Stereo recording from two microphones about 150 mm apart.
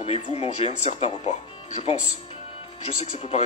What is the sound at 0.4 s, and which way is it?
Speech, 50° left (ahead or behind).